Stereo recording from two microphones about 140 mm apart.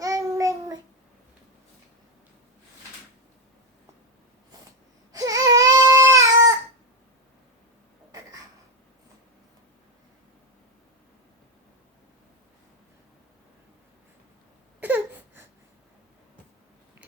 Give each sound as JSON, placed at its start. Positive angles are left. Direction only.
{"t": 0.0, "sound": "child singing", "side_deg": -25}
{"t": 5.1, "sound": "baby cry", "side_deg": -25}
{"t": 14.8, "sound": "a sound", "side_deg": -15}